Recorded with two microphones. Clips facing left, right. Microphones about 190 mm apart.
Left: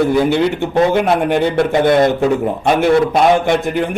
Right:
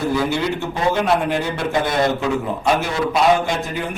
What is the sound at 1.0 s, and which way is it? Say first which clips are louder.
Speech: left 5 dB; 60° left (ahead or behind).